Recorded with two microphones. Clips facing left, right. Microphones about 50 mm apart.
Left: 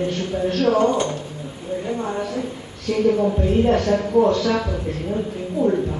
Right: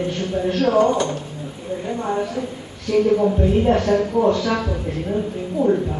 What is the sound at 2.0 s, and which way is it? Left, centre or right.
Speech, right.